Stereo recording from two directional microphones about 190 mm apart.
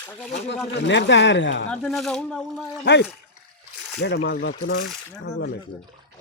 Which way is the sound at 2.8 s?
65° left (ahead or behind).